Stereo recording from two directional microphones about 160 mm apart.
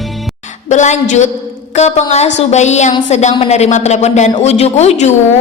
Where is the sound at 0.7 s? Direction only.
50° left (ahead or behind).